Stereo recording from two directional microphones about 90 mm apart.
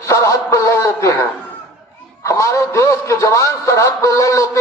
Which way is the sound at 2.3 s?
35° left (ahead or behind).